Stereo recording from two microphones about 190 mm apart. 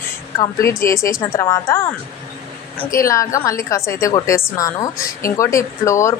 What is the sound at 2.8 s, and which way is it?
A woman's voice, 15° left (ahead or behind).